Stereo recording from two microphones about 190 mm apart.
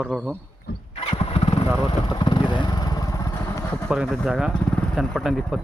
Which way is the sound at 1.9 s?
25° left (ahead or behind).